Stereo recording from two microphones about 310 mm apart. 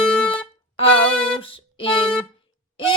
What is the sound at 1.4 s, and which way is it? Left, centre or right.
Music, centre.